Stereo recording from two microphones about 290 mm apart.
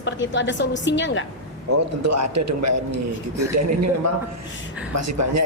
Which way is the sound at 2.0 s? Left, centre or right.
Right.